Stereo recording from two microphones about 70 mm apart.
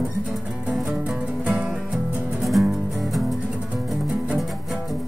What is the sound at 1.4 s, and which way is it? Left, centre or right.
Music, centre.